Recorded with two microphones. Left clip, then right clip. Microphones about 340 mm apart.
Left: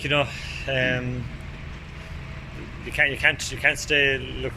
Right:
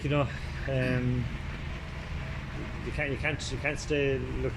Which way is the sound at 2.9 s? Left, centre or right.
Left.